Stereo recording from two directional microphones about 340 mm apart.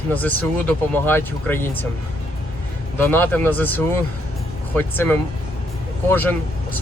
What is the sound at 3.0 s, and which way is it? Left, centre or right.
Speech, centre.